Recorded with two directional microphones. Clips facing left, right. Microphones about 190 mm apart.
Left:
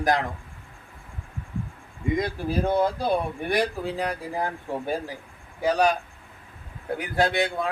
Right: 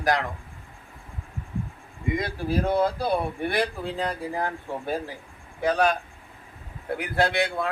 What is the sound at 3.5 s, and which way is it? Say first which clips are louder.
Speech: left 5 dB; 10° left (ahead or behind).